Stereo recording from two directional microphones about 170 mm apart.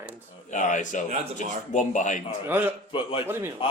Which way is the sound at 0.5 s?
45° left (ahead or behind).